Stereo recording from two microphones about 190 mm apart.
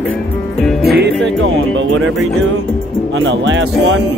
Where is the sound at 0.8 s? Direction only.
55° right (ahead or behind).